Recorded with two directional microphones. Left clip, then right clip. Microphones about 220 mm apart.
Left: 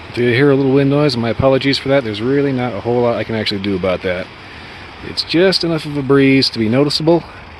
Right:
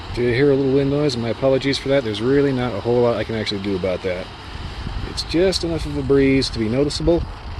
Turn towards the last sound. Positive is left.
turn(degrees=25)  # may be behind; listen again after turning